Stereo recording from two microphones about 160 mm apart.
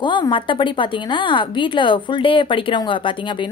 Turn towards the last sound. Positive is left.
turn(degrees=30)  # may be behind; listen again after turning